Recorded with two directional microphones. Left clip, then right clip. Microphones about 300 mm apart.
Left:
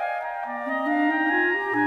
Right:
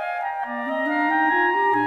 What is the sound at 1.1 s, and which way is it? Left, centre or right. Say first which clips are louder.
Organ: right 3 dB; right.